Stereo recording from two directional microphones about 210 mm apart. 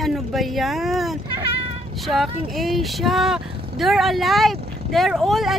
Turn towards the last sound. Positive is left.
turn(degrees=0)  # may be behind; listen again after turning